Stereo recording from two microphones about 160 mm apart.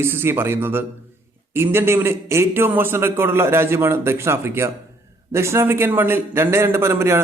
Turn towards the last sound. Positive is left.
turn(degrees=-15)  # may be behind; listen again after turning